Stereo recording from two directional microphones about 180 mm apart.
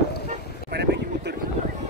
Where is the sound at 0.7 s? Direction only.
70° right (ahead or behind).